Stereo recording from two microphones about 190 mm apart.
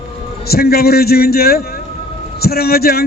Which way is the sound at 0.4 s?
55° left (ahead or behind).